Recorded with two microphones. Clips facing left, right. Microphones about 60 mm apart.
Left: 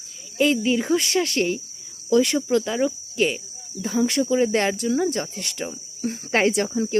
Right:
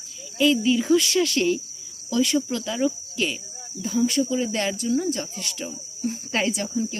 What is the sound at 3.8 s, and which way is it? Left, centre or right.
Speech, left.